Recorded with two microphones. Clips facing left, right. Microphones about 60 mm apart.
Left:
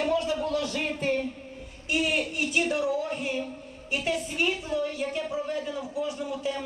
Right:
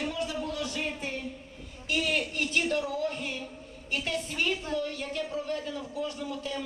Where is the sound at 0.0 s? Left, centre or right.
Left.